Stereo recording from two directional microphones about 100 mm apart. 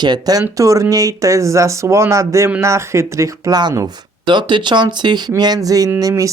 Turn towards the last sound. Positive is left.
turn(degrees=-35)  # may be behind; listen again after turning